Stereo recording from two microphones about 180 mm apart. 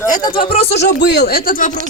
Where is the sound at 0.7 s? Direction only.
75° left (ahead or behind); by 1.7 s 50° left (ahead or behind).